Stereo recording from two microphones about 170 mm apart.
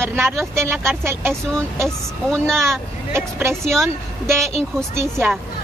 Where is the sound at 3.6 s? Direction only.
Centre (ahead or behind).